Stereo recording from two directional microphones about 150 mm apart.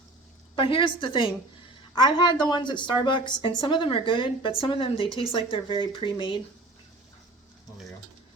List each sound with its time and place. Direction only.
0.5 s a woman's voice: 35° left (ahead or behind)